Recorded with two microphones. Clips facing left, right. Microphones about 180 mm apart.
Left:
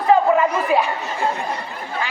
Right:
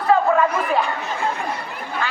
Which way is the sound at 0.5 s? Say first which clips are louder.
Left 2 dB; 10° left (ahead or behind).